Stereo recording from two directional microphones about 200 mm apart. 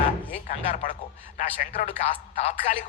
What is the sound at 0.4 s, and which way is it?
A man's voice, 40° left (ahead or behind).